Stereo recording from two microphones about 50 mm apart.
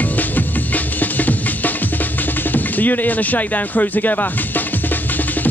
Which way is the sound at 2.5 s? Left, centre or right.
Left.